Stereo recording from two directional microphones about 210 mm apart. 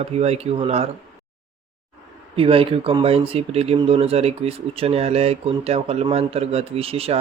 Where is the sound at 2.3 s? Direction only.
25° right (ahead or behind).